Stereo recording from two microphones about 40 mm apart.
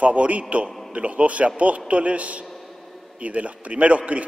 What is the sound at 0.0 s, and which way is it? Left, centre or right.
A man's voice, right.